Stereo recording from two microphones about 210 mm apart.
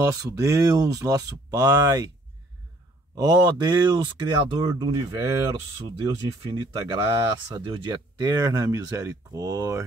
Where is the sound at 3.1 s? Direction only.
20° right (ahead or behind).